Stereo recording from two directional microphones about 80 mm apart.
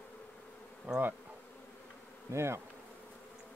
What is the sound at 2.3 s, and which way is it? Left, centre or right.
Bee, right.